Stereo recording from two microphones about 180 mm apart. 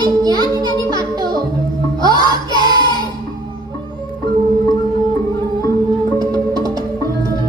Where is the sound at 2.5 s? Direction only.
25° left (ahead or behind).